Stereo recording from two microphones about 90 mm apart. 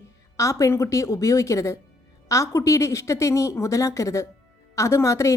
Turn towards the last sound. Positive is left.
turn(degrees=35)  # may be behind; listen again after turning